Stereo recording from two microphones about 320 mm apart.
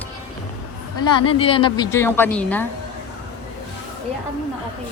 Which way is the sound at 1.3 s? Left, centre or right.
Centre.